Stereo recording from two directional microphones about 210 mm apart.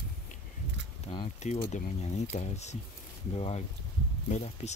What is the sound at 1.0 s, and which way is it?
Speech, 25° left (ahead or behind).